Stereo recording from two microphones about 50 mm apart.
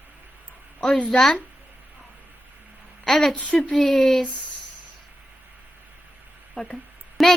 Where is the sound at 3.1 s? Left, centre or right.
Centre.